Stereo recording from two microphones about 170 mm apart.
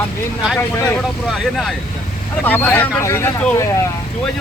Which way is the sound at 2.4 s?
10° left (ahead or behind).